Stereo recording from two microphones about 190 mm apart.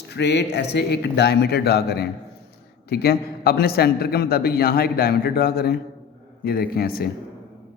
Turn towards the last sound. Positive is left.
turn(degrees=55)  # may be behind; listen again after turning